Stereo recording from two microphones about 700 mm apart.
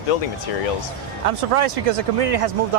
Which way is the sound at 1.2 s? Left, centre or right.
Right.